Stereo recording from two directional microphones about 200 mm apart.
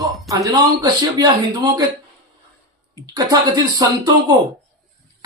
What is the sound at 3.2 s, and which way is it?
Speech, 20° right (ahead or behind).